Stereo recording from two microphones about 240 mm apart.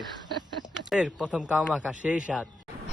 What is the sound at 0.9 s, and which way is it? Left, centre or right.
Speech, centre.